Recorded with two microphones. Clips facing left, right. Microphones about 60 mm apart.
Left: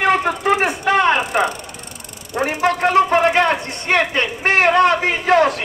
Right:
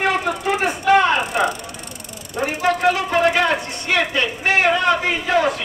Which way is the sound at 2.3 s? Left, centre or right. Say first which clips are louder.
Left 2 dB; left.